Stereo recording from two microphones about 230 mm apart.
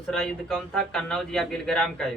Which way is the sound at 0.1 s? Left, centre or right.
Centre.